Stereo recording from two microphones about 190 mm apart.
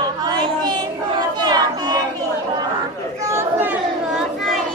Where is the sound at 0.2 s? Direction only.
20° right (ahead or behind).